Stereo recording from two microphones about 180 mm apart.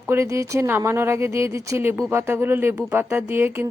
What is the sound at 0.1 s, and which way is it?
A woman's voice, 15° right (ahead or behind).